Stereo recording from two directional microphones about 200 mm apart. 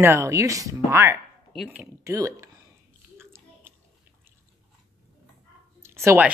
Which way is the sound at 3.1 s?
10° right (ahead or behind).